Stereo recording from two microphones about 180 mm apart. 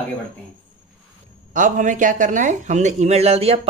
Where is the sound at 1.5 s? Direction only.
45° right (ahead or behind).